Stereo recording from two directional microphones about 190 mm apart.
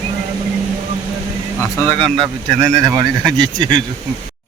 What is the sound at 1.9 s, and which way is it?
Speech, 30° right (ahead or behind).